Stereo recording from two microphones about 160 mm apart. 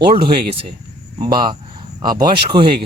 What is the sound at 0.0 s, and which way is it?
Speech, 70° right (ahead or behind).